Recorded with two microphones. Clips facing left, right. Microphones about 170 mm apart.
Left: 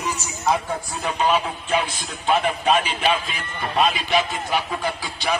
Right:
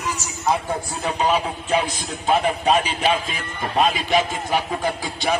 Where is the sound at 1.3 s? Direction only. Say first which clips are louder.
Right 1 dB; 40° right (ahead or behind).